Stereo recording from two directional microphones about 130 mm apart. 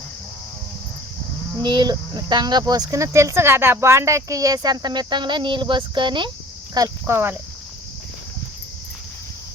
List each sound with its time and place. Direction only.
1.5 s speech: 35° right (ahead or behind)